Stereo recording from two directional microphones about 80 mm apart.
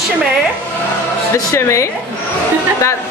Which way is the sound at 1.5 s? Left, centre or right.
Left.